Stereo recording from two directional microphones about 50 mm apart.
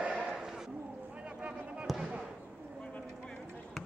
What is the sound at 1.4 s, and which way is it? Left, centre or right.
Fireworks, right.